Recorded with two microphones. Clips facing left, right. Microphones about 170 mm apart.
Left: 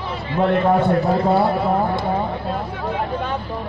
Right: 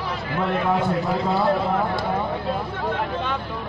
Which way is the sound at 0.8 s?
65° left (ahead or behind).